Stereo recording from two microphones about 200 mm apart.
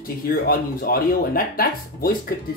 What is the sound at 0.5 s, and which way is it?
Speech, 45° left (ahead or behind).